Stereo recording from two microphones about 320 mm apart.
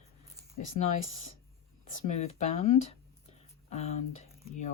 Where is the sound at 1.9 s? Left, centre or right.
Left.